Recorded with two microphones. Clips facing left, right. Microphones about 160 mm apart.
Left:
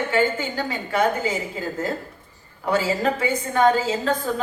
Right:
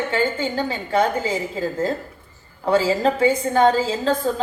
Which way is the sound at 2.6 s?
30° right (ahead or behind).